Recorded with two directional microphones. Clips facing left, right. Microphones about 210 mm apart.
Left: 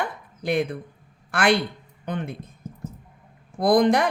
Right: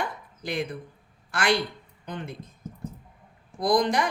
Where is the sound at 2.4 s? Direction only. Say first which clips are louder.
Left 1 dB; 10° left (ahead or behind).